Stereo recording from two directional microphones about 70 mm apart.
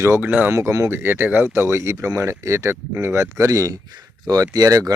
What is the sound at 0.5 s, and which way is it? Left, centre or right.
Speech, right.